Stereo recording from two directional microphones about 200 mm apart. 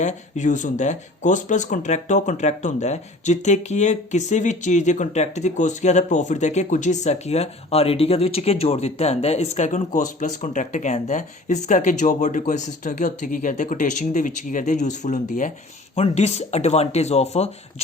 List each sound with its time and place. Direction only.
0.0 s speech: 35° left (ahead or behind)